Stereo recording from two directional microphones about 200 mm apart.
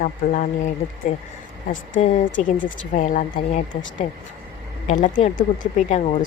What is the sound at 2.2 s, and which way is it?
Speech, 70° left (ahead or behind).